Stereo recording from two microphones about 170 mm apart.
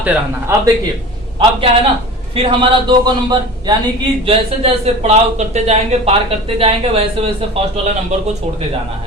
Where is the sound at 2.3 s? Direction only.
30° right (ahead or behind).